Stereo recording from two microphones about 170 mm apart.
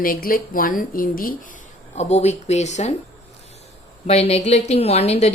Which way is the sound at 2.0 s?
40° left (ahead or behind).